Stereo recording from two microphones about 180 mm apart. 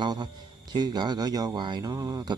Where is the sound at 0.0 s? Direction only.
25° right (ahead or behind).